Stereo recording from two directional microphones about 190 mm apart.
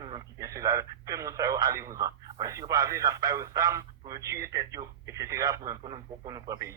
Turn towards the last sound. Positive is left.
turn(degrees=-20)  # may be behind; listen again after turning